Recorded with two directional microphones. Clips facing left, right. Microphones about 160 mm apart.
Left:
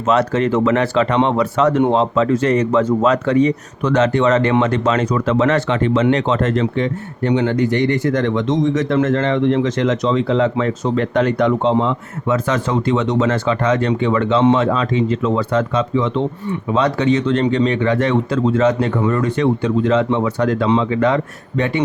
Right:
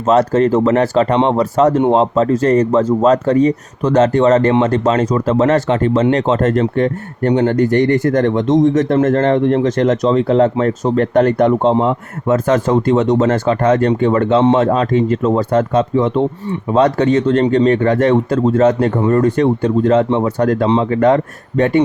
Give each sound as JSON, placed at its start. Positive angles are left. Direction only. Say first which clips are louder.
{"t": 0.1, "sound": "speech", "louder": "right 4 dB", "side_deg": -40}